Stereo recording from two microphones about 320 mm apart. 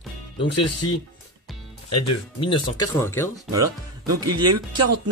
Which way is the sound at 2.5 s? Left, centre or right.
Centre.